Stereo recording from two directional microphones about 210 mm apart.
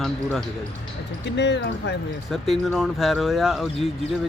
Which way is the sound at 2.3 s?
Centre (ahead or behind).